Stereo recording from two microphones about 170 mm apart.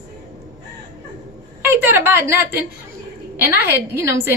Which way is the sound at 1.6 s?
10° right (ahead or behind).